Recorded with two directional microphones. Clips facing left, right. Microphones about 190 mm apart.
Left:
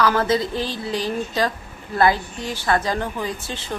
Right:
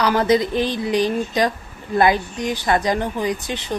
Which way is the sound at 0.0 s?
15° right (ahead or behind).